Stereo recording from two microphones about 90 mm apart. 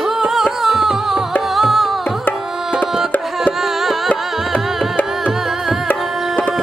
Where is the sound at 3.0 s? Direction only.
5° right (ahead or behind).